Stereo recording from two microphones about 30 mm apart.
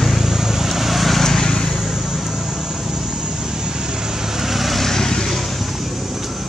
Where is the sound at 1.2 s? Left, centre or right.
Centre.